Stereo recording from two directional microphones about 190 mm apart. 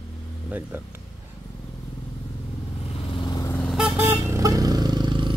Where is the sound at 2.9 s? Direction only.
30° left (ahead or behind).